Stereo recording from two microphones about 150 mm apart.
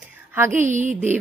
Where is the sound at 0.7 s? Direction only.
55° right (ahead or behind).